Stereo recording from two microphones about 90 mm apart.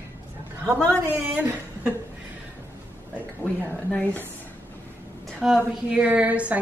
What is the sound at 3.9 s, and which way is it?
Speech, 20° left (ahead or behind).